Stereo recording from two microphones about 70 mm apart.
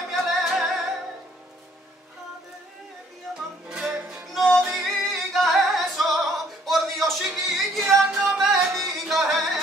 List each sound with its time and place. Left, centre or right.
0.1 s music: centre
3.3 s music: centre
3.6 s music: centre
4.3 s music: centre